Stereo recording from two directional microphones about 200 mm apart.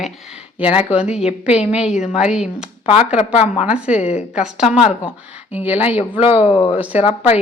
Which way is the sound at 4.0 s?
35° left (ahead or behind).